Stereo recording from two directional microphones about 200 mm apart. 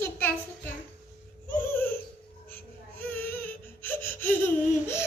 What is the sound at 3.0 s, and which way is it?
Baby cry, 10° left (ahead or behind).